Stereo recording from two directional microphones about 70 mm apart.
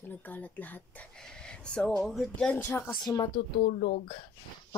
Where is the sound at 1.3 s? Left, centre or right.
Centre.